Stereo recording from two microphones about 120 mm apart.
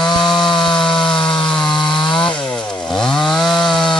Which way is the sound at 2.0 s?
40° left (ahead or behind).